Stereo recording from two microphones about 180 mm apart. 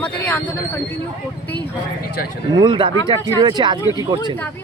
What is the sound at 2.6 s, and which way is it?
Speech, 25° right (ahead or behind).